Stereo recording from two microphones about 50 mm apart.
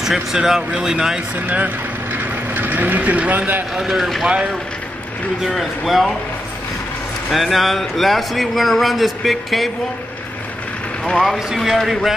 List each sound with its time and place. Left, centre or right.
0.0 s speech: centre
2.5 s speech: right
3.7 s speech: centre
5.4 s speech: centre
7.3 s speech: centre
11.3 s speech: centre